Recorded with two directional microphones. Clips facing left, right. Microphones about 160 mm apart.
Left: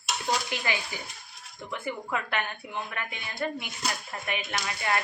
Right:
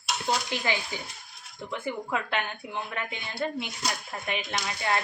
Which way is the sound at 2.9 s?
25° right (ahead or behind).